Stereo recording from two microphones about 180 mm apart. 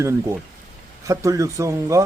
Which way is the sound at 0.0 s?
15° right (ahead or behind).